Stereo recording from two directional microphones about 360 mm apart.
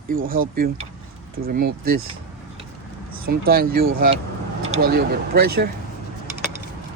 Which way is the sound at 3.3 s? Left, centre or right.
Right.